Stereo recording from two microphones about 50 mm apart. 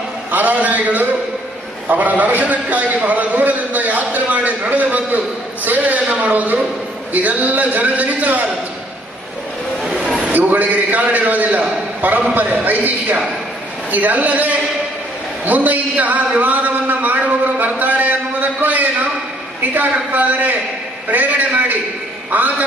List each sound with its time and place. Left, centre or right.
0.3 s a man's voice: right
10.0 s a sound: centre
10.3 s a man's voice: right